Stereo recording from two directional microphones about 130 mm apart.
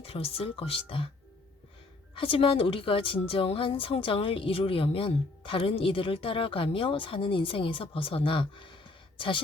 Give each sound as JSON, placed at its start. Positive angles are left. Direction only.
{"t": 0.0, "sound": "a woman's voice", "side_deg": 50}
{"t": 2.1, "sound": "a woman's voice", "side_deg": 45}